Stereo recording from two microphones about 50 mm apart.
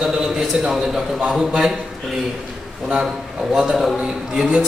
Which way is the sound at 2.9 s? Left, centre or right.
Centre.